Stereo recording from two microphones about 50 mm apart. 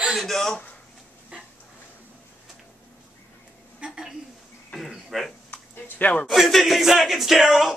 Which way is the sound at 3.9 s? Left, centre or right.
Centre.